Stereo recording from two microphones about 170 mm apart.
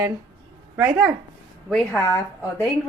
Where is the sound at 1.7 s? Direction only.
5° left (ahead or behind).